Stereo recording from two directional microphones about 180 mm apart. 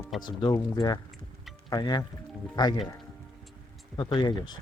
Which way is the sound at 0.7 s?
20° left (ahead or behind).